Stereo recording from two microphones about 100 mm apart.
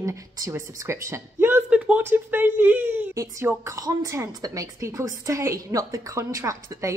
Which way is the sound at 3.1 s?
30° right (ahead or behind).